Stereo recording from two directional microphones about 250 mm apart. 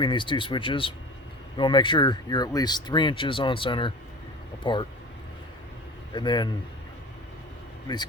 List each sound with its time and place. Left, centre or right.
0.0 s speech: centre
6.1 s speech: centre